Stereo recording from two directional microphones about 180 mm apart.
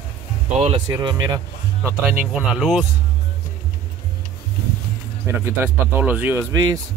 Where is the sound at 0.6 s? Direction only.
25° right (ahead or behind).